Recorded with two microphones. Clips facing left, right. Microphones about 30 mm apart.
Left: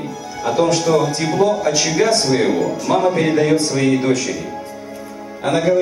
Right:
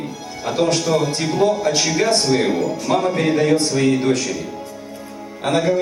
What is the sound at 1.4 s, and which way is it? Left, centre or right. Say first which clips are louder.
Speech: left 1 dB; right.